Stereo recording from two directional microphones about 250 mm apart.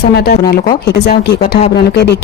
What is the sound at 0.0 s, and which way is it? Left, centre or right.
Speech, left.